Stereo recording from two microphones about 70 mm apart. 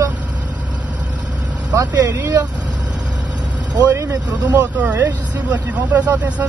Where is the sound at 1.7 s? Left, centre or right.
Right.